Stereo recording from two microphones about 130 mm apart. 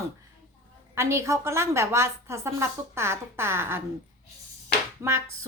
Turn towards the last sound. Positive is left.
turn(degrees=-20)  # may be behind; listen again after turning